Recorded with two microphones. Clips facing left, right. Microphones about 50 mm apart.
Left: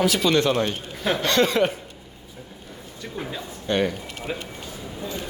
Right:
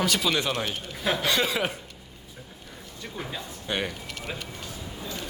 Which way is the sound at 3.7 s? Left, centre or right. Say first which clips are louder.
Left 7 dB; centre.